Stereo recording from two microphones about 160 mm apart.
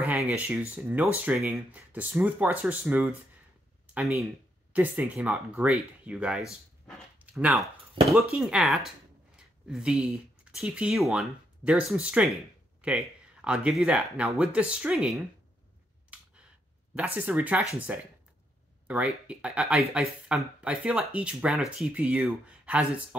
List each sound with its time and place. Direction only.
0.0 s speech: 10° right (ahead or behind)
8.0 s speech: 35° right (ahead or behind)
8.3 s speech: 5° right (ahead or behind)
16.9 s speech: 5° right (ahead or behind)